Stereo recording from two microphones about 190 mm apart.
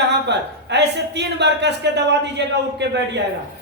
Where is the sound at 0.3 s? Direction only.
65° right (ahead or behind).